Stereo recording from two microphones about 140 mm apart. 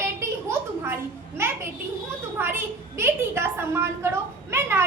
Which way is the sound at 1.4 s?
20° right (ahead or behind).